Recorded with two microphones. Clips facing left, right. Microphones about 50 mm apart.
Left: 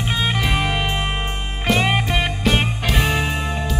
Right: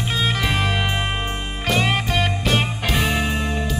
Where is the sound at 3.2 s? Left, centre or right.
Centre.